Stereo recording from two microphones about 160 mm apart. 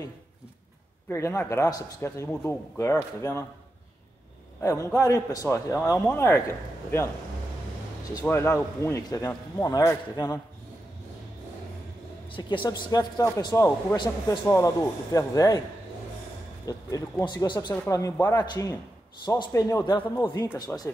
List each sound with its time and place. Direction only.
1.0 s a man's voice: 15° left (ahead or behind)
4.6 s a man's voice: 15° left (ahead or behind)
8.2 s a man's voice: 15° left (ahead or behind)
12.3 s a man's voice: 30° left (ahead or behind)
16.6 s a man's voice: 25° left (ahead or behind)
18.4 s a man's voice: 25° left (ahead or behind)
20.5 s a man's voice: 25° left (ahead or behind)